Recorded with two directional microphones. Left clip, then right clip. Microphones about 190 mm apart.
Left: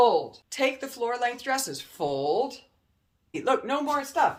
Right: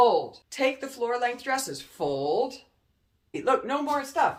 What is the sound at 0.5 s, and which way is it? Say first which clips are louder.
Speech: even; 35° left (ahead or behind).